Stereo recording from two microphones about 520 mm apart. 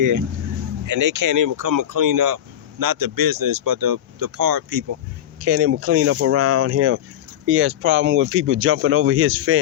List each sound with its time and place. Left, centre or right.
0.9 s speech: right
5.4 s speech: right